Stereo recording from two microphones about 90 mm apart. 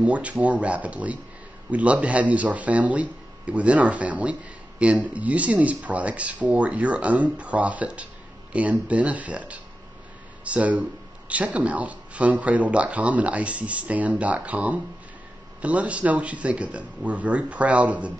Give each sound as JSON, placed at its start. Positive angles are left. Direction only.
{"t": 0.0, "sound": "speech", "side_deg": -15}